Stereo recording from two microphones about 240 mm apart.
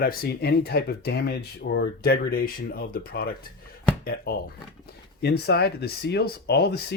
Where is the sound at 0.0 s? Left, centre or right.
Left.